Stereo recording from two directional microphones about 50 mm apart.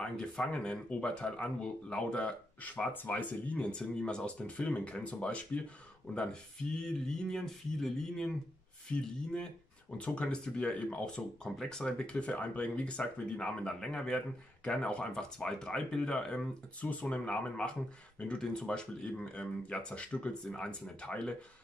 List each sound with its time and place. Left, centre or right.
0.5 s speech: left
2.9 s speech: left
3.7 s speech: centre
16.8 s speech: left